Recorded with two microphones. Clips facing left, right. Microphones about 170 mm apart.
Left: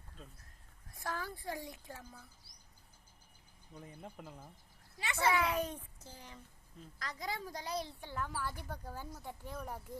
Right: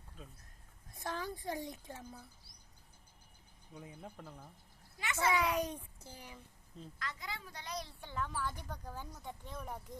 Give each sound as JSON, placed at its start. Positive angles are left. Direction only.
{"t": 0.9, "sound": "a child's voice", "side_deg": -20}
{"t": 3.8, "sound": "speech", "side_deg": 0}
{"t": 4.9, "sound": "a woman's voice", "side_deg": 30}
{"t": 5.3, "sound": "a child's voice", "side_deg": -15}
{"t": 7.0, "sound": "a woman's voice", "side_deg": 40}
{"t": 8.0, "sound": "speech", "side_deg": 5}